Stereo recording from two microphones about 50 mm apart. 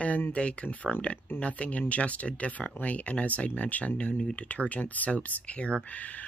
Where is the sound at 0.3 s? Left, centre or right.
Left.